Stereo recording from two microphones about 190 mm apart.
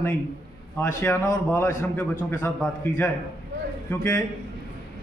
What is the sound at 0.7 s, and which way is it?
A man's voice, 10° left (ahead or behind).